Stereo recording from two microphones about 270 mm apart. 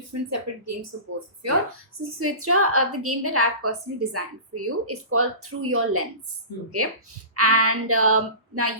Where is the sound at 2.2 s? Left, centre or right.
Right.